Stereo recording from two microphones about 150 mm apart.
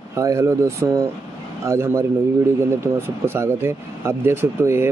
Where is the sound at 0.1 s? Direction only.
20° right (ahead or behind).